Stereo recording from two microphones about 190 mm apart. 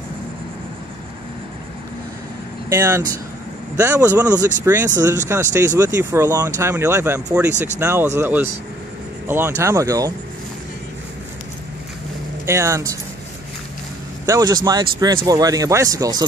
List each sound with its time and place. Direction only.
2.7 s speech: 10° right (ahead or behind)
12.4 s speech: 15° right (ahead or behind)
14.2 s speech: 20° right (ahead or behind)